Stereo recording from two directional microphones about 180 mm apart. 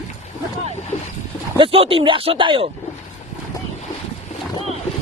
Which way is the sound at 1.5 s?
30° right (ahead or behind).